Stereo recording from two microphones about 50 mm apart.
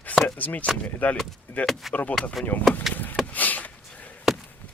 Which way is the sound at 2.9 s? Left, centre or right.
Left.